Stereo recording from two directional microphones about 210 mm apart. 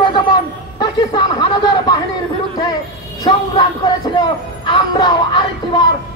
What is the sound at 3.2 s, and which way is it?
Speech, 20° left (ahead or behind).